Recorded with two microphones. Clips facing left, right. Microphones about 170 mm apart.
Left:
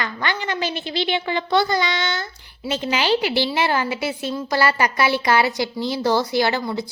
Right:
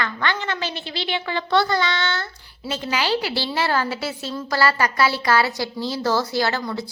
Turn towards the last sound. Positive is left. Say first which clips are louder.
# left 3 dB
turn(degrees=15)  # may be behind; listen again after turning